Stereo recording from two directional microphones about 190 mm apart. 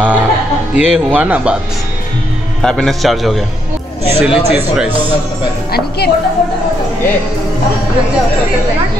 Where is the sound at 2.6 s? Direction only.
5° left (ahead or behind).